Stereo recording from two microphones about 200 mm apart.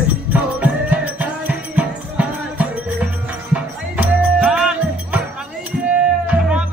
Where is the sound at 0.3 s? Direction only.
5° right (ahead or behind).